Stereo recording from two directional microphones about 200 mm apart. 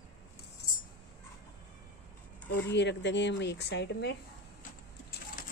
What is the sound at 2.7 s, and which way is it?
Speech, 60° left (ahead or behind).